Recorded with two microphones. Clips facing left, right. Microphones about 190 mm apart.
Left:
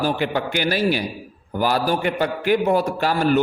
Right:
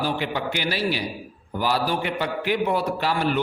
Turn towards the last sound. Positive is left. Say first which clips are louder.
# left 5 dB
turn(degrees=45)  # may be behind; listen again after turning